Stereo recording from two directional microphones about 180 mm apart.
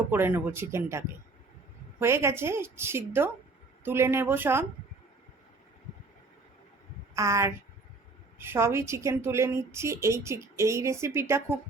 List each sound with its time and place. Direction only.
0.1 s a woman's voice: 10° right (ahead or behind)
7.2 s a woman's voice: 15° right (ahead or behind)